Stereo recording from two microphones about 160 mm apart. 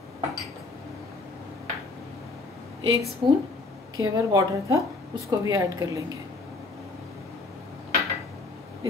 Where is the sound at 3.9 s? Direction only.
20° right (ahead or behind).